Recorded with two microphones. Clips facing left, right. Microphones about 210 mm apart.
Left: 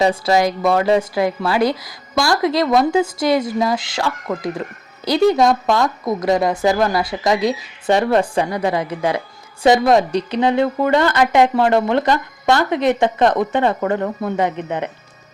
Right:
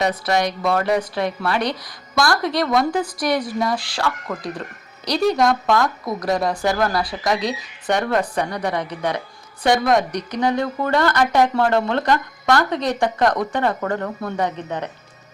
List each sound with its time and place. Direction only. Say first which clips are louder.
0.0 s a woman's voice: left 5 dB; 25° left (ahead or behind)